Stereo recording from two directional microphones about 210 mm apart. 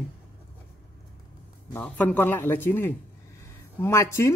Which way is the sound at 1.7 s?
10° left (ahead or behind).